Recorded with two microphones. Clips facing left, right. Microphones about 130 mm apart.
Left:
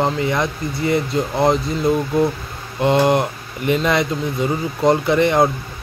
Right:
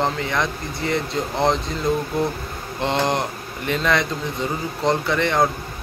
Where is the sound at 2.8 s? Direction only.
10° left (ahead or behind).